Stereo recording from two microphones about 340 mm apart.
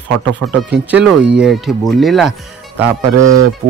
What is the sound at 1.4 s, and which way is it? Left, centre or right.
Speech, centre.